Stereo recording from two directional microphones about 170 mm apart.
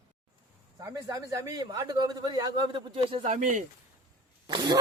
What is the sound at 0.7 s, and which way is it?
A man's voice, 20° right (ahead or behind).